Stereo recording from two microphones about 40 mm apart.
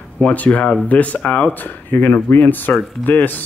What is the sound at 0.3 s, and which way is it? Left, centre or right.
Speech, left.